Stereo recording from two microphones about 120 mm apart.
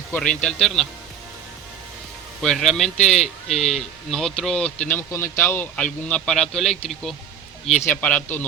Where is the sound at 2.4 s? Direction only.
5° left (ahead or behind).